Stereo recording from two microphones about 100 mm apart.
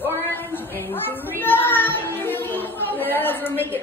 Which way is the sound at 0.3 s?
20° left (ahead or behind).